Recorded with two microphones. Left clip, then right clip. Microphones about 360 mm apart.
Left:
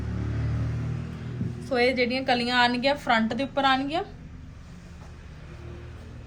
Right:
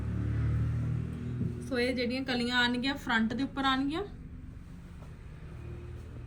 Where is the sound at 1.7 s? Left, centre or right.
Centre.